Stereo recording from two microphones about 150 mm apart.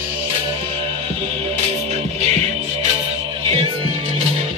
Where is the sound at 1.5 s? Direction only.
50° right (ahead or behind).